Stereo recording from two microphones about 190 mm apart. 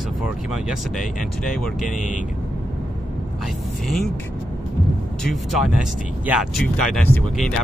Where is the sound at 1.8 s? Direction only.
45° left (ahead or behind).